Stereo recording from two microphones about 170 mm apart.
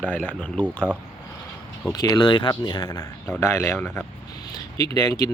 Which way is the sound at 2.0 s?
25° left (ahead or behind).